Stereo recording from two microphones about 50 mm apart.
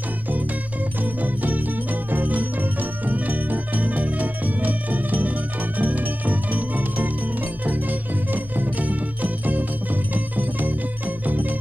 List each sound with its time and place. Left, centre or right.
1.0 s music: right